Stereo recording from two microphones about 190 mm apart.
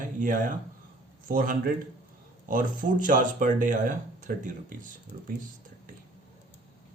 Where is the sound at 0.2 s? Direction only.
45° right (ahead or behind).